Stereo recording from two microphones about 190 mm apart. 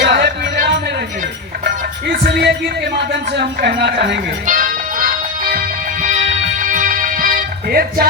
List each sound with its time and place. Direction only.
0.1 s music: 65° right (ahead or behind)
2.1 s music: 55° right (ahead or behind)
4.4 s music: 45° right (ahead or behind)